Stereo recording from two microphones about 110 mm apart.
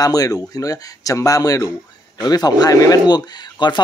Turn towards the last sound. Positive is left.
turn(degrees=40)  # may be behind; listen again after turning